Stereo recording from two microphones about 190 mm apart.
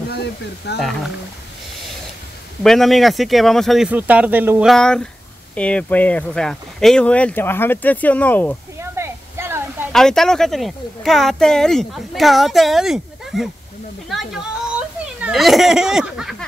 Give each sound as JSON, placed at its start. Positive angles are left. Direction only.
{"t": 0.1, "sound": "speech", "side_deg": 60}
{"t": 0.7, "sound": "speech", "side_deg": 0}
{"t": 2.6, "sound": "speech", "side_deg": 0}
{"t": 8.9, "sound": "a sound", "side_deg": -15}
{"t": 9.9, "sound": "speech", "side_deg": 0}